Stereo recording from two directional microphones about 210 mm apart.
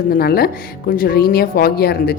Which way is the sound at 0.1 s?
45° left (ahead or behind).